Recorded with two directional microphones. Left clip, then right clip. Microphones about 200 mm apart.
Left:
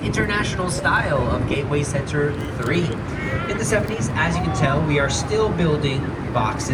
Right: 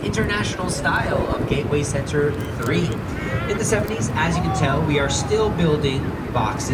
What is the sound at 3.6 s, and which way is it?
Speech, 35° left (ahead or behind).